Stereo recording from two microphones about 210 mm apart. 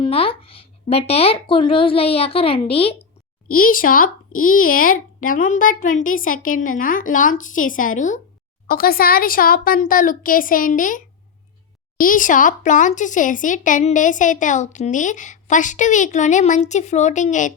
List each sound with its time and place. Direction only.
0.0 s speech: 25° left (ahead or behind)
3.5 s speech: 40° left (ahead or behind)